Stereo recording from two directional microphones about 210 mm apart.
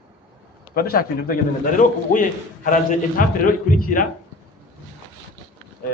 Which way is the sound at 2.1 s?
40° left (ahead or behind).